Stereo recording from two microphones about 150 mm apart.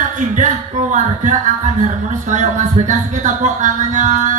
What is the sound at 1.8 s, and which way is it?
Speech, 55° right (ahead or behind).